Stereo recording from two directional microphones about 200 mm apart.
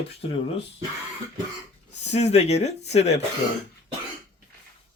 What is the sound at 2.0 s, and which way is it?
Speech, 35° left (ahead or behind).